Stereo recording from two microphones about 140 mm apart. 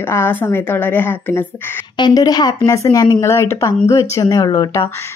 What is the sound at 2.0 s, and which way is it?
Speech, 30° left (ahead or behind).